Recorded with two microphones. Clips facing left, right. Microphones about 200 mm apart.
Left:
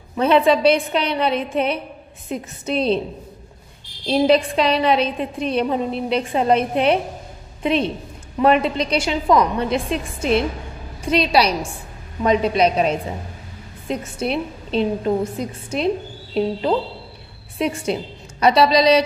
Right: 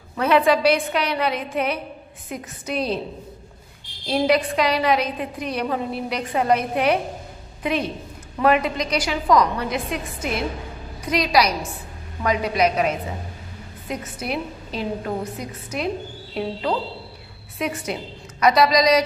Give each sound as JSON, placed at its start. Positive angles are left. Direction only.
{"t": 0.2, "sound": "a woman's voice", "side_deg": 25}
{"t": 4.0, "sound": "a woman's voice", "side_deg": 25}
{"t": 17.6, "sound": "a woman's voice", "side_deg": 30}